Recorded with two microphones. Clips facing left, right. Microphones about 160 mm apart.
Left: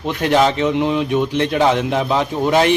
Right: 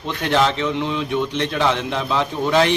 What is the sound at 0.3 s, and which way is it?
Speech, 15° left (ahead or behind).